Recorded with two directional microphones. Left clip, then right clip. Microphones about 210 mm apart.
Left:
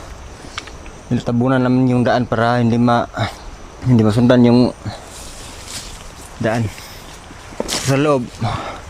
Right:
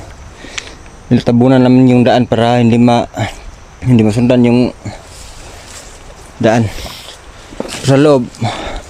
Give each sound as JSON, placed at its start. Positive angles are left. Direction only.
{"t": 1.1, "sound": "speech", "side_deg": -20}
{"t": 6.4, "sound": "speech", "side_deg": -20}